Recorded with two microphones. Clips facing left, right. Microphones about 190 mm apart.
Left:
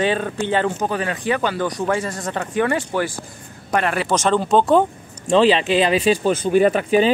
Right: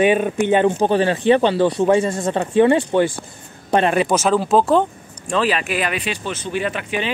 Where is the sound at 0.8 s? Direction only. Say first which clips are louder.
Right 6 dB; 30° right (ahead or behind).